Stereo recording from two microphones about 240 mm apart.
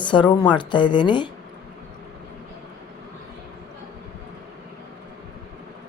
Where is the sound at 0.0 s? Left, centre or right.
Centre.